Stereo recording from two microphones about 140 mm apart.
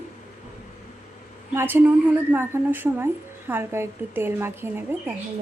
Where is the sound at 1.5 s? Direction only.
15° right (ahead or behind).